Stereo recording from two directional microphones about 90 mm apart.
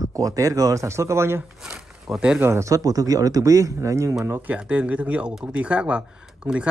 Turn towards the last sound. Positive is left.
turn(degrees=-15)  # may be behind; listen again after turning